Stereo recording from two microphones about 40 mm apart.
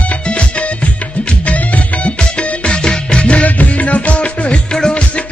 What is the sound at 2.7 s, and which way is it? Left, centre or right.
Music, left.